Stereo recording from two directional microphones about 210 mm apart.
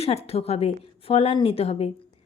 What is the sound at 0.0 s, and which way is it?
A woman's voice, 30° left (ahead or behind).